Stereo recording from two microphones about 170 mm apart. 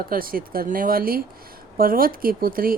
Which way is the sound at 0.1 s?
60° right (ahead or behind).